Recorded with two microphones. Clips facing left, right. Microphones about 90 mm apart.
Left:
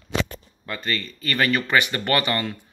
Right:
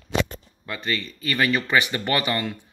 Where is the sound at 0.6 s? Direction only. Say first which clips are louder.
Even; 10° right (ahead or behind).